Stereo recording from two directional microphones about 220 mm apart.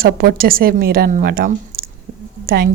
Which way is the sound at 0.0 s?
40° right (ahead or behind).